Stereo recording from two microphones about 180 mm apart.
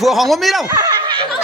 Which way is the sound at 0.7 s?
25° right (ahead or behind).